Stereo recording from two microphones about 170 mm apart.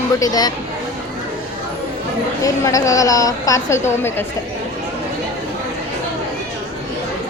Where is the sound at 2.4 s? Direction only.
20° left (ahead or behind).